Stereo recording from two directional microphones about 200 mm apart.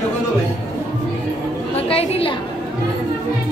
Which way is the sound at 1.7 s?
30° left (ahead or behind).